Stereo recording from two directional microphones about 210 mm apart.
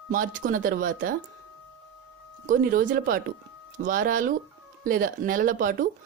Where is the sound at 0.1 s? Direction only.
40° right (ahead or behind).